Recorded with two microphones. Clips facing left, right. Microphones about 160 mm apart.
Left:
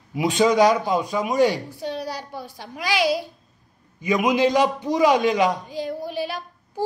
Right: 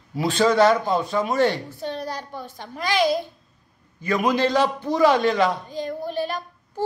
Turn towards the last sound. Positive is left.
turn(degrees=10)  # may be behind; listen again after turning